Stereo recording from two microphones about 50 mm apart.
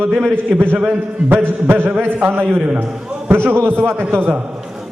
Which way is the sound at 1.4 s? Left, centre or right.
Right.